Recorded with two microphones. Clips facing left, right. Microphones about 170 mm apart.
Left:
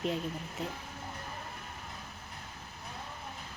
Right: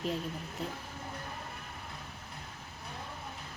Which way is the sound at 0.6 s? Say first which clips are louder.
Even; centre (ahead or behind).